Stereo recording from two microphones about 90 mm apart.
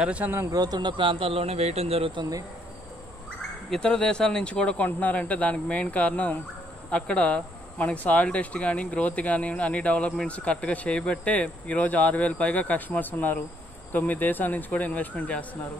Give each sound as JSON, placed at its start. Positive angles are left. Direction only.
{"t": 0.0, "sound": "a man's voice", "side_deg": -15}
{"t": 0.5, "sound": "a man's voice", "side_deg": -45}
{"t": 3.7, "sound": "speech", "side_deg": 10}